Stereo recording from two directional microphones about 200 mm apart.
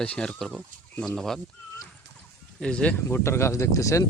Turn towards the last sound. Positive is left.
turn(degrees=15)  # may be behind; listen again after turning